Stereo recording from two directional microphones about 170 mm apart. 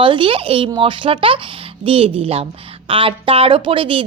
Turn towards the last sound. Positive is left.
turn(degrees=-30)  # may be behind; listen again after turning